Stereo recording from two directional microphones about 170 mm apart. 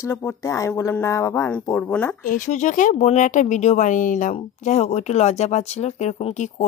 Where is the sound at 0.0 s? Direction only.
15° left (ahead or behind).